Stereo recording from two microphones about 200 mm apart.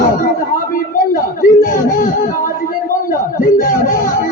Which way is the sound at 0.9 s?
45° left (ahead or behind).